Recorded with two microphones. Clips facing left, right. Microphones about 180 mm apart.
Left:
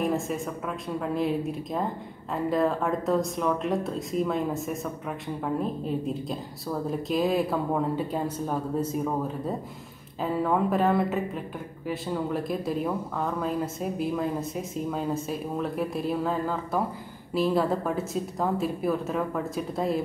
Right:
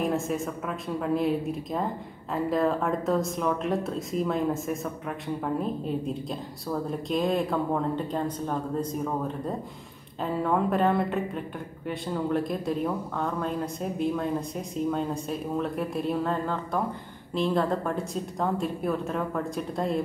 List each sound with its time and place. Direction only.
0.0 s a woman's voice: centre (ahead or behind)
10.2 s a woman's voice: centre (ahead or behind)